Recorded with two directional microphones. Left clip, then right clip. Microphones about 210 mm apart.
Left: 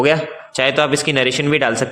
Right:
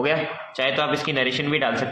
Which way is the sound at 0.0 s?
55° left (ahead or behind).